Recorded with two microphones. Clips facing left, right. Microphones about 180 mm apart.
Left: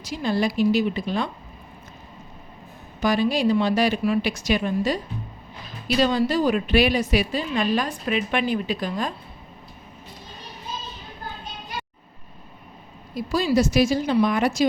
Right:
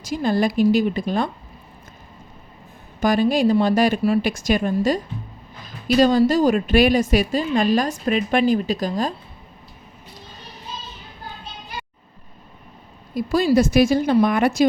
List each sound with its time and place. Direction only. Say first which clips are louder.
0.0 s a woman's voice: right 3 dB; 45° right (ahead or behind)
3.0 s a woman's voice: right 3 dB; 50° right (ahead or behind)
6.0 s a woman's voice: right 5 dB; 45° right (ahead or behind)
13.1 s a woman's voice: right 4 dB; 55° right (ahead or behind)